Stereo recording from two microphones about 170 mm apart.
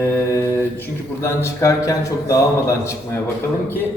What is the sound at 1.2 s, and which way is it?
A man's voice, 15° left (ahead or behind).